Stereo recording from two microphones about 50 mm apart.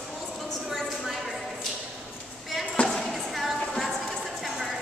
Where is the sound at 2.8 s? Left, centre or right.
Left.